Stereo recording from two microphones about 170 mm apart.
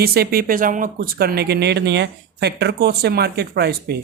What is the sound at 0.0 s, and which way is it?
Speech, 65° right (ahead or behind).